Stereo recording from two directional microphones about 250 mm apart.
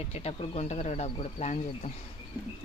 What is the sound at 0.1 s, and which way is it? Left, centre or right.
Speech, left.